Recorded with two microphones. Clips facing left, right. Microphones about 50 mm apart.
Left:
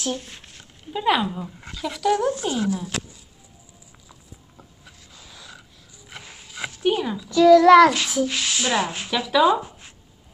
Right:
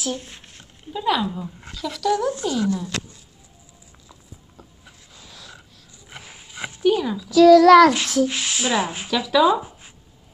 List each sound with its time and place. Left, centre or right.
0.6 s a child's voice: centre
5.2 s snort: centre
6.0 s a sound: centre
6.8 s speech: left
7.1 s a child's voice: centre
8.3 s speech: centre
9.1 s a child's voice: centre
9.6 s a sound: centre